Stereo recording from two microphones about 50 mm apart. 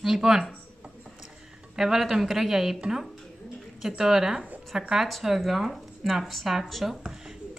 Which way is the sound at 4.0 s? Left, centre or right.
Centre.